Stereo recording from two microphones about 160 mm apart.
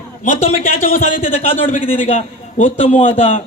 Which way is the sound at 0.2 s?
55° left (ahead or behind).